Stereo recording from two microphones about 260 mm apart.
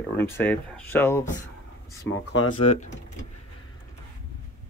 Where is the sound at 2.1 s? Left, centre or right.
Left.